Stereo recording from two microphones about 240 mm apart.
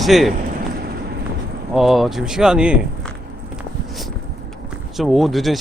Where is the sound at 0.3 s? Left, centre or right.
Right.